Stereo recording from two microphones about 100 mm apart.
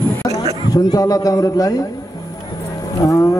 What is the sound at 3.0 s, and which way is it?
Speech, 30° left (ahead or behind).